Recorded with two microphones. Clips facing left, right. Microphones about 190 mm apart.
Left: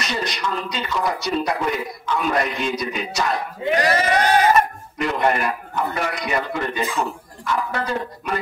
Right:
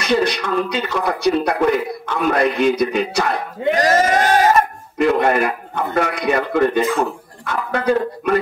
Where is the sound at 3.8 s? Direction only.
45° right (ahead or behind).